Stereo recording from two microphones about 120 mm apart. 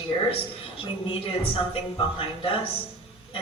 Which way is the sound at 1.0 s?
50° left (ahead or behind).